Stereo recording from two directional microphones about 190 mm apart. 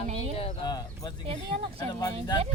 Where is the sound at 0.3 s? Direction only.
25° left (ahead or behind).